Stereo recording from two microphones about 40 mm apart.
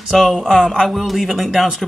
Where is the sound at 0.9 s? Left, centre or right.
Centre.